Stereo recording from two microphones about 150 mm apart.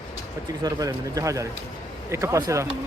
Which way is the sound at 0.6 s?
25° right (ahead or behind).